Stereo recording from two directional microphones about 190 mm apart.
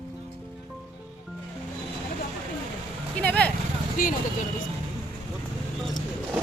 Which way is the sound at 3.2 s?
10° left (ahead or behind).